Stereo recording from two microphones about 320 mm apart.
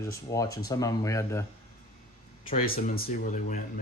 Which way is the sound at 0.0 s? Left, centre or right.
Centre.